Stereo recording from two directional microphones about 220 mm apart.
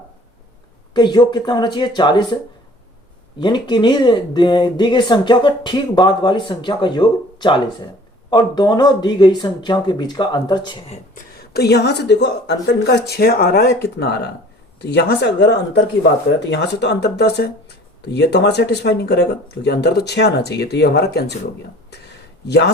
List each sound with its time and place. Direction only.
0.9 s speech: 20° left (ahead or behind)
3.4 s speech: 20° left (ahead or behind)
11.5 s speech: 50° left (ahead or behind)
22.4 s speech: 50° left (ahead or behind)